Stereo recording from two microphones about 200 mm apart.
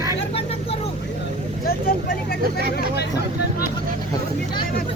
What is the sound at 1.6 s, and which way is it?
Vehicle, 50° left (ahead or behind).